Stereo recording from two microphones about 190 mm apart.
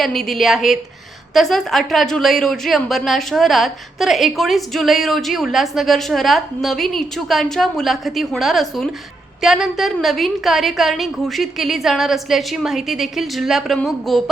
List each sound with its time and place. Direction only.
0.0 s a woman's voice: centre (ahead or behind)